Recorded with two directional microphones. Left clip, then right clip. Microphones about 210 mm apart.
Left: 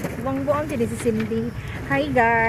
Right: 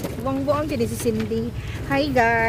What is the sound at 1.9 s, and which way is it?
Speech, 15° right (ahead or behind).